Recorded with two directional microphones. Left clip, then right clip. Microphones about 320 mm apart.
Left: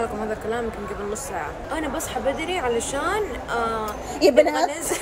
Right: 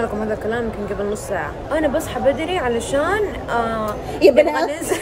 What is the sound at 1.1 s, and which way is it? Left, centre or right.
Speech, centre.